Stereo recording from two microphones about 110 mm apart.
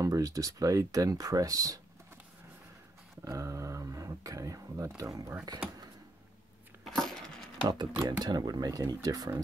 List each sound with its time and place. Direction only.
0.0 s speech: 30° right (ahead or behind)
3.3 s speech: 30° right (ahead or behind)
6.9 s a sound: 5° left (ahead or behind)
7.6 s speech: 40° right (ahead or behind)